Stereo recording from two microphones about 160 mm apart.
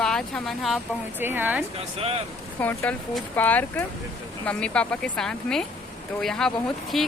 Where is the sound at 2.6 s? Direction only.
10° left (ahead or behind).